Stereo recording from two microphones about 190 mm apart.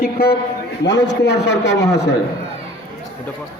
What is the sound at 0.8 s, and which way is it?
A man's voice, 65° left (ahead or behind).